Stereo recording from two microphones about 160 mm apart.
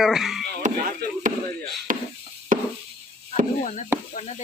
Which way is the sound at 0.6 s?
55° right (ahead or behind).